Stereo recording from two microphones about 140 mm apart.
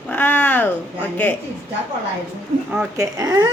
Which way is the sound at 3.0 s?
25° right (ahead or behind).